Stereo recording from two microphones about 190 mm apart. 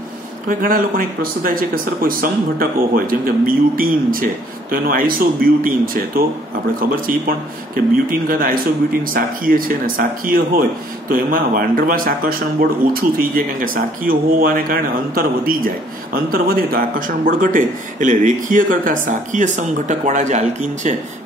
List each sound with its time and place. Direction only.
0.5 s speech: 45° right (ahead or behind)